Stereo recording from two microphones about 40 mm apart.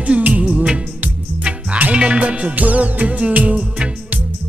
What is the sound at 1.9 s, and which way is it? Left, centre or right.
Music, right.